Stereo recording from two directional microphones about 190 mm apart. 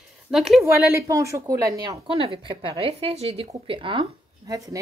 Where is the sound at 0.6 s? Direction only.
15° right (ahead or behind).